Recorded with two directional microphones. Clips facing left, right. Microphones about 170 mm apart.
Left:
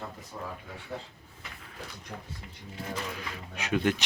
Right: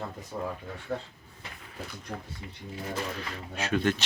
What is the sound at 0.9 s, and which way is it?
Speech, 50° right (ahead or behind).